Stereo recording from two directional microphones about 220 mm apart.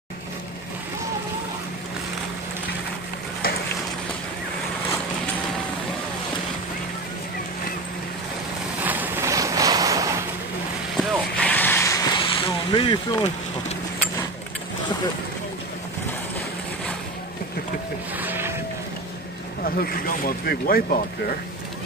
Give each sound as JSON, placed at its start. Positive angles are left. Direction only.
{"t": 8.8, "sound": "a sound", "side_deg": -10}
{"t": 11.0, "sound": "vehicle", "side_deg": 5}
{"t": 18.1, "sound": "boat", "side_deg": -10}
{"t": 19.6, "sound": "speech", "side_deg": 40}